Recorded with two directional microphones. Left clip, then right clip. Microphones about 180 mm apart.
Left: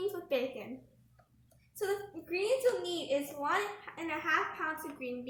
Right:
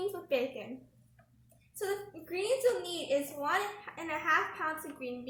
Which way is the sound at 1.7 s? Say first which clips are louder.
Left 1 dB; centre (ahead or behind).